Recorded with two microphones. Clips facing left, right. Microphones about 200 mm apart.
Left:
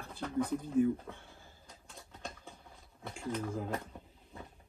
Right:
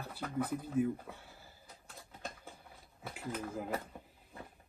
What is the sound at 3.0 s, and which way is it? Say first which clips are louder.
Speech: left 3 dB; 5° right (ahead or behind).